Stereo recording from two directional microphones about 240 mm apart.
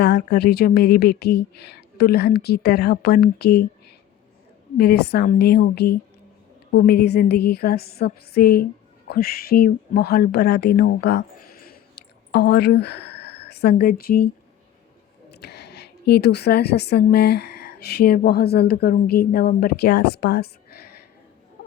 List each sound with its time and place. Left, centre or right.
0.0 s a woman's voice: left
4.8 s a sound: left
9.0 s a woman's voice: left
15.3 s a woman's voice: left